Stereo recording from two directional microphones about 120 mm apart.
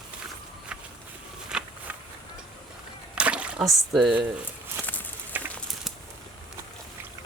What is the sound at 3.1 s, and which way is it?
Splash, 10° right (ahead or behind).